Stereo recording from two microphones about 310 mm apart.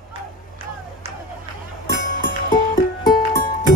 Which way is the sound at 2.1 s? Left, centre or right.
Left.